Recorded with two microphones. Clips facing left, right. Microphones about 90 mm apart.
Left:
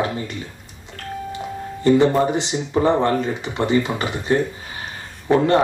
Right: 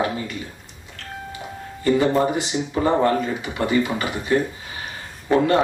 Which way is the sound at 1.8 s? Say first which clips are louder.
Left 3 dB; 30° left (ahead or behind).